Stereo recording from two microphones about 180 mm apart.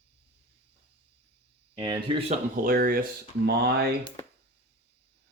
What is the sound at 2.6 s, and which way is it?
Speech, 55° right (ahead or behind).